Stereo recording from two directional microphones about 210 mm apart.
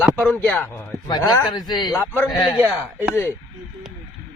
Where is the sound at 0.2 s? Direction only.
5° left (ahead or behind).